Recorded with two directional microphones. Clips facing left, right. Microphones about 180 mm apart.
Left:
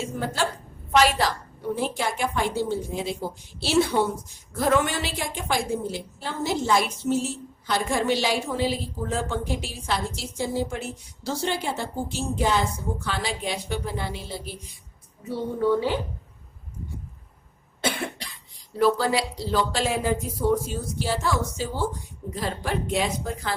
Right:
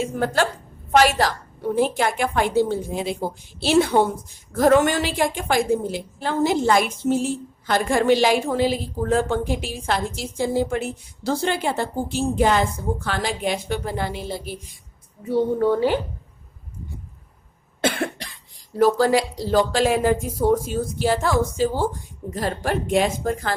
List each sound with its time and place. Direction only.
0.0 s a woman's voice: 55° right (ahead or behind)
0.9 s a woman's voice: 45° right (ahead or behind)
2.0 s a woman's voice: 55° right (ahead or behind)
18.8 s a woman's voice: 45° right (ahead or behind)